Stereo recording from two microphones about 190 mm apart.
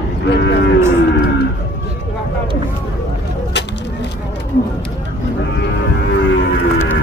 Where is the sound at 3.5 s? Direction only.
65° left (ahead or behind).